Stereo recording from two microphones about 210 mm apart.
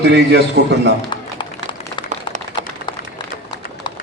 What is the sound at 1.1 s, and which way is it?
Music, 20° left (ahead or behind).